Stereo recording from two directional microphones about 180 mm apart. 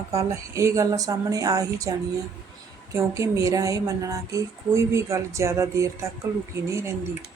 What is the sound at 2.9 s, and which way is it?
Speech, 15° right (ahead or behind).